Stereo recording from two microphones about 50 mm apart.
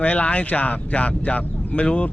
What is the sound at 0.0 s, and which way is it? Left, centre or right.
Speech, left.